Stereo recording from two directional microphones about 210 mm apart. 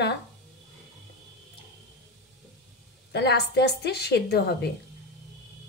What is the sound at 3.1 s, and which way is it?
A woman's voice, 50° left (ahead or behind).